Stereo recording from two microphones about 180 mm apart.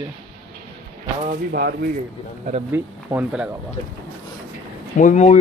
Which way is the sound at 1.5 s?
60° right (ahead or behind).